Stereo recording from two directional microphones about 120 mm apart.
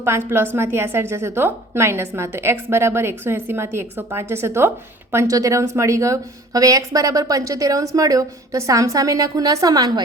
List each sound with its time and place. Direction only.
0.0 s a woman's voice: 20° right (ahead or behind)